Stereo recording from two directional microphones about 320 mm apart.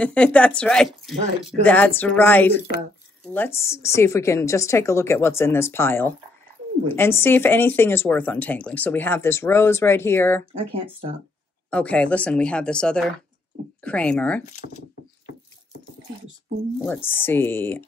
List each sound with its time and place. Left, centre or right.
0.0 s a woman's voice: centre
10.5 s speech: centre
11.7 s a woman's voice: centre
16.8 s speech: centre